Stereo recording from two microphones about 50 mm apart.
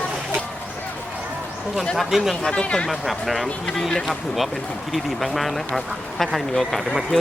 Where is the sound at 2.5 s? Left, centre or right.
Left.